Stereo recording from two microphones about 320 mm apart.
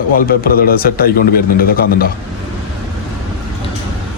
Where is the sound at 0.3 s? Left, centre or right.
Left.